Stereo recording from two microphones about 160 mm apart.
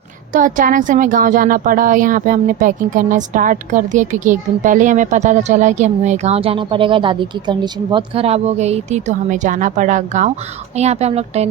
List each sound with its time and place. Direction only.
0.3 s speech: 55° right (ahead or behind)